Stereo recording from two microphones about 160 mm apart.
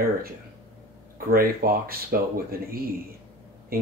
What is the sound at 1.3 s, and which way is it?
Speech, 65° right (ahead or behind).